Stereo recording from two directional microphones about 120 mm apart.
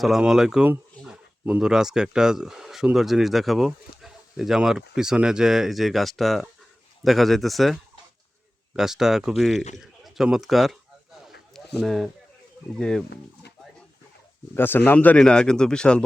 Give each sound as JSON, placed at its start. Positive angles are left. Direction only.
{"t": 0.0, "sound": "speech", "side_deg": -5}
{"t": 11.3, "sound": "a sound", "side_deg": 0}
{"t": 12.7, "sound": "speech", "side_deg": 5}
{"t": 14.5, "sound": "speech", "side_deg": 15}